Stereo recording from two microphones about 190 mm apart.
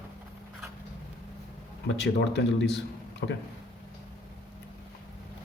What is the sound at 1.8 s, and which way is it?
Speech, 65° left (ahead or behind).